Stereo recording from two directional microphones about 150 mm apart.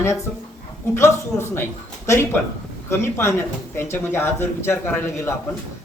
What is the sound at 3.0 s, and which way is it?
Speech, 15° left (ahead or behind).